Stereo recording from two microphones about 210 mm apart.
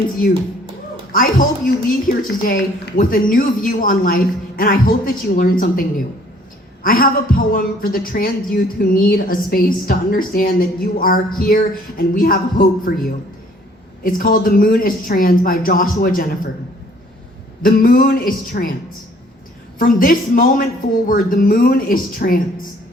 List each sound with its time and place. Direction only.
1.1 s a woman's voice: 40° left (ahead or behind)
6.8 s a woman's voice: 45° left (ahead or behind)
17.6 s a woman's voice: 45° left (ahead or behind)
19.8 s a woman's voice: 40° left (ahead or behind)